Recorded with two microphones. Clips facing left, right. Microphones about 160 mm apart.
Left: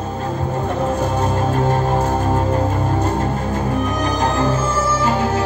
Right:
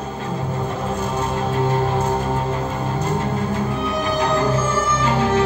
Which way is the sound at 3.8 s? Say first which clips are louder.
Left 1 dB; 45° left (ahead or behind).